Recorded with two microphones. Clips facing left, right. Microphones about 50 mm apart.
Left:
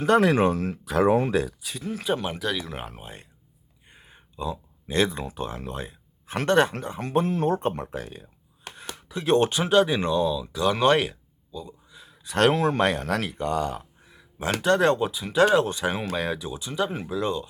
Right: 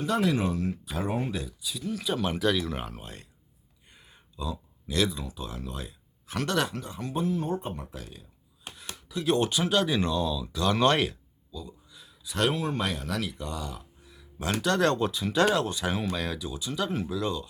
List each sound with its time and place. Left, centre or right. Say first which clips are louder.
0.0 s speech: left 7 dB; left
1.8 s speech: left 4 dB; left
2.3 s speech: right 3 dB; centre; by 3.2 s left
3.8 s a sound: left 4 dB; left
5.1 s speech: left 6 dB; left
7.1 s speech: left 6 dB; left
8.7 s chopping: left 2 dB; left
9.7 s speech: left 7 dB; centre
11.5 s a sound: left 4 dB; left
12.2 s speech: left 7 dB; left
14.1 s a sound: left 4 dB; left
14.6 s speech: left 4 dB; left
15.6 s speech: left 2 dB; left